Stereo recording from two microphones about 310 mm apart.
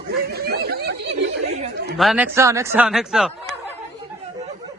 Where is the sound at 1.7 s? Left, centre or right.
Right.